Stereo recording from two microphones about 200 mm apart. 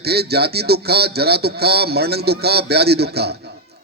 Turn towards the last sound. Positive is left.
turn(degrees=-55)  # may be behind; listen again after turning